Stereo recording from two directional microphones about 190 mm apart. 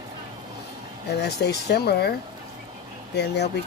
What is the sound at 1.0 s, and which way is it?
Speech, 60° left (ahead or behind).